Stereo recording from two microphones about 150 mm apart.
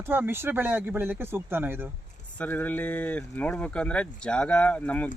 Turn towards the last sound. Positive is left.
turn(degrees=10)  # may be behind; listen again after turning